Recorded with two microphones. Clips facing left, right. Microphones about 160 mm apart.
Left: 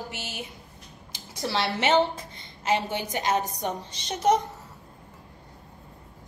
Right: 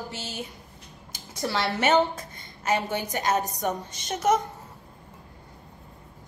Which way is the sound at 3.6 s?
50° right (ahead or behind).